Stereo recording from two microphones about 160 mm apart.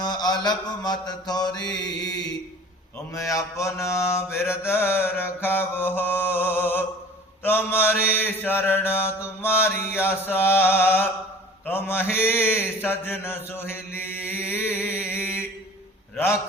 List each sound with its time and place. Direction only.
0.0 s mantra: 25° left (ahead or behind)